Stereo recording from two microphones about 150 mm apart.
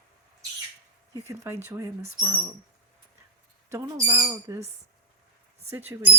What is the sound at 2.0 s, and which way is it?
Speech, 45° right (ahead or behind).